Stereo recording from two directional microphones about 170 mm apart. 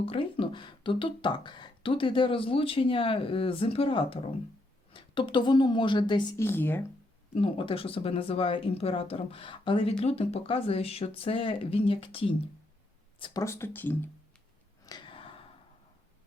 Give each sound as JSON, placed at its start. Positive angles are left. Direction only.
{"t": 0.0, "sound": "a woman's voice", "side_deg": 30}
{"t": 6.4, "sound": "speech", "side_deg": 15}
{"t": 7.3, "sound": "speech", "side_deg": 30}
{"t": 13.4, "sound": "speech", "side_deg": 15}
{"t": 14.8, "sound": "a sound", "side_deg": 25}